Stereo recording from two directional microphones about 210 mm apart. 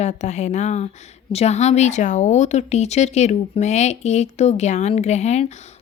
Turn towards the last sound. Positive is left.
turn(degrees=30)  # may be behind; listen again after turning